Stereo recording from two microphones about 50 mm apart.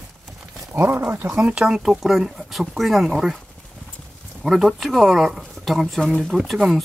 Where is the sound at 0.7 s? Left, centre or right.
Right.